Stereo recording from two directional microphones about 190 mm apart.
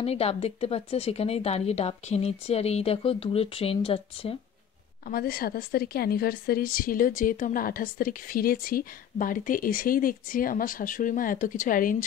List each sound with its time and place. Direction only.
0.0 s speech: 30° left (ahead or behind)
5.0 s a woman's voice: 50° left (ahead or behind)